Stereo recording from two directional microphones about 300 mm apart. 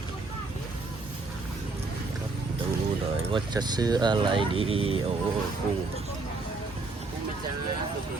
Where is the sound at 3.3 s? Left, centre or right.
Centre.